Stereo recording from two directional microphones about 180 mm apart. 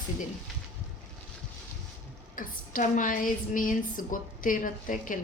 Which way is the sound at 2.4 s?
50° left (ahead or behind).